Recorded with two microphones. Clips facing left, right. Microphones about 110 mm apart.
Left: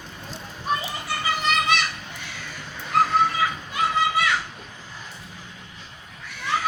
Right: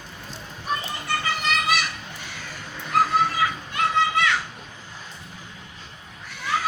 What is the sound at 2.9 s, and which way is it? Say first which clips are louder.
Children playing: left 1 dB; centre (ahead or behind).